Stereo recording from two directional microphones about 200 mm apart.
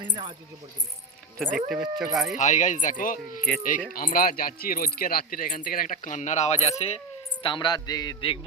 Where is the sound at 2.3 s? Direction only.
40° left (ahead or behind).